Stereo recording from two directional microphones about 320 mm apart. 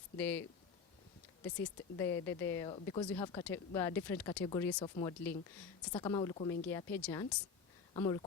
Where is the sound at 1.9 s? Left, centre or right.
Centre.